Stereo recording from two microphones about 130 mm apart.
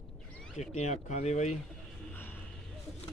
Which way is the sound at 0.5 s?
65° left (ahead or behind).